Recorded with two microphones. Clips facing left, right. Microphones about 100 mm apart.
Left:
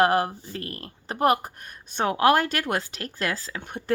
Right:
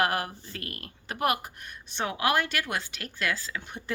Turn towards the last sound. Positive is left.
turn(degrees=50)  # may be behind; listen again after turning